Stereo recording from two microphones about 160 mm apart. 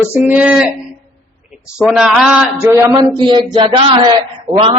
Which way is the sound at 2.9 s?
30° right (ahead or behind).